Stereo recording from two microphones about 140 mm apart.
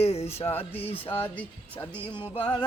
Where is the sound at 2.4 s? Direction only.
35° left (ahead or behind).